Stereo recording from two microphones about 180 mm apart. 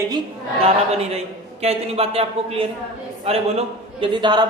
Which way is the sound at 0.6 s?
35° right (ahead or behind).